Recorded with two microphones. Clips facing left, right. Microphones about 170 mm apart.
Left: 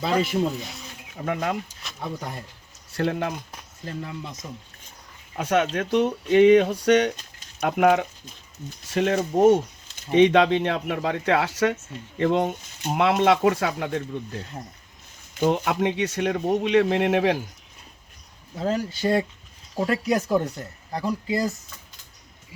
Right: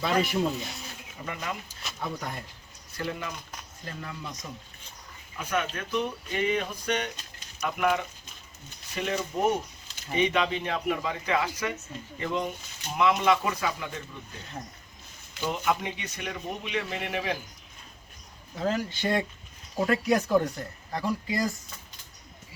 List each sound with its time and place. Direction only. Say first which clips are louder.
0.3 s speech: left 3 dB; centre (ahead or behind)
1.1 s speech: left 9 dB; 70° left (ahead or behind)
2.0 s speech: left 2 dB; 25° left (ahead or behind)
2.9 s speech: left 9 dB; 75° left (ahead or behind)
3.8 s speech: left 5 dB; 25° left (ahead or behind)
5.4 s speech: left 8 dB; 80° left
7.6 s speech: left 7 dB; 65° left (ahead or behind)
8.9 s speech: left 8 dB; 80° left
15.4 s speech: left 7 dB; 85° left
18.6 s speech: left 4 dB; 30° left (ahead or behind)